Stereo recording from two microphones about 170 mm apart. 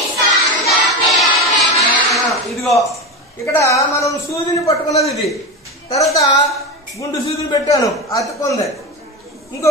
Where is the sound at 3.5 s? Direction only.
20° left (ahead or behind).